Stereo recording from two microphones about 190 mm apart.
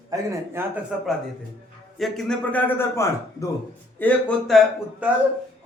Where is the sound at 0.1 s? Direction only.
15° right (ahead or behind).